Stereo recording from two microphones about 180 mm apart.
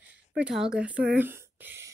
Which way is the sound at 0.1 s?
5° right (ahead or behind).